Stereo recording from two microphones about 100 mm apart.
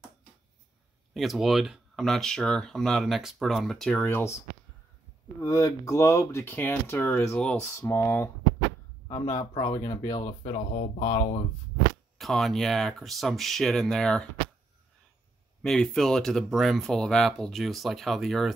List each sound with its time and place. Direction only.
1.1 s speech: centre (ahead or behind)
4.0 s speech: 20° left (ahead or behind)
5.4 s speech: 35° left (ahead or behind)
7.3 s speech: 10° left (ahead or behind)
7.8 s speech: 25° left (ahead or behind)
9.1 s speech: 40° left (ahead or behind)
10.8 s speech: 80° left
12.2 s speech: centre (ahead or behind)
15.6 s speech: 5° left (ahead or behind)